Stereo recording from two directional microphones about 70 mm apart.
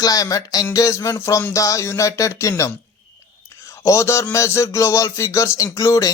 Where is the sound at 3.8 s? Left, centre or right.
Left.